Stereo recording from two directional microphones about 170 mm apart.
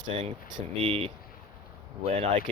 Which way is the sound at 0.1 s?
40° right (ahead or behind).